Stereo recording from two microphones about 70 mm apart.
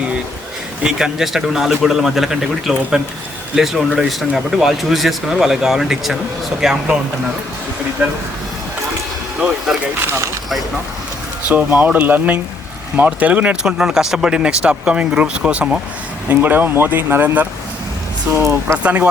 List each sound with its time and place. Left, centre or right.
0.8 s speech: centre
11.4 s speech: right
16.3 s speech: right
18.3 s speech: right
18.8 s speech: centre